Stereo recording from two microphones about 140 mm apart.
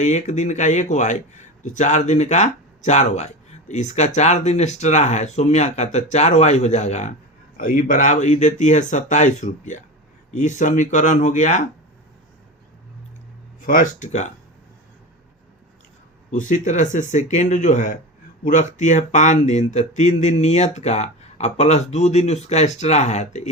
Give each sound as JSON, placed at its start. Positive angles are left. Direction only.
{"t": 0.0, "sound": "speech", "side_deg": 55}
{"t": 13.7, "sound": "speech", "side_deg": 70}
{"t": 16.3, "sound": "speech", "side_deg": 65}